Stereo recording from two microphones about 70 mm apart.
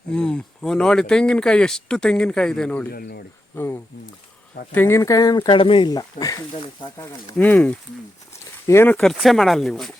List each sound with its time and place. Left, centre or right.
0.1 s speech: centre
3.5 s speech: left
4.9 s speech: left
7.3 s speech: left
8.6 s speech: left
9.1 s speech: centre